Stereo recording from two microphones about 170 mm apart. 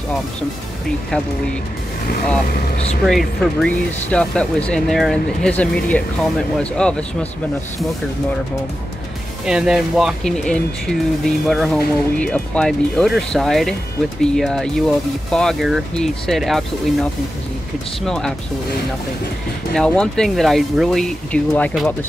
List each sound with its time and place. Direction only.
3.1 s speech: 5° left (ahead or behind)
9.5 s speech: 5° right (ahead or behind)
18.0 s speech: centre (ahead or behind)
19.7 s speech: 5° left (ahead or behind)